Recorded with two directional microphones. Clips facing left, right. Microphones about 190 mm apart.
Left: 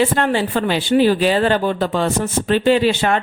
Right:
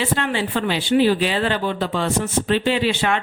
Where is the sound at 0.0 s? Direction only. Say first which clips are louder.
Left 5 dB; 45° left (ahead or behind).